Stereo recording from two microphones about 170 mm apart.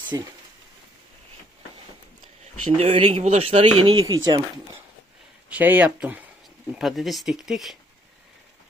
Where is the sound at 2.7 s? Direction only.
35° right (ahead or behind).